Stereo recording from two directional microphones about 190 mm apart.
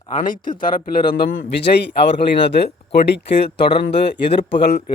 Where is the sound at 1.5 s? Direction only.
60° left (ahead or behind).